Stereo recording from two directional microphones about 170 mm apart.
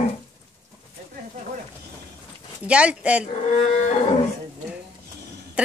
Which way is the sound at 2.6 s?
5° right (ahead or behind).